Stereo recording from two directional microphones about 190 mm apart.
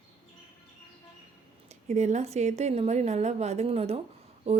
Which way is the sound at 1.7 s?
35° right (ahead or behind).